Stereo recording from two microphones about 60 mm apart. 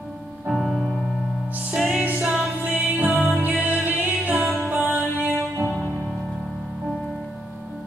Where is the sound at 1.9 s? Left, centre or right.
Right.